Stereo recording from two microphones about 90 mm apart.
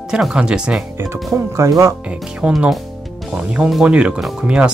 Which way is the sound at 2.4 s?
15° right (ahead or behind).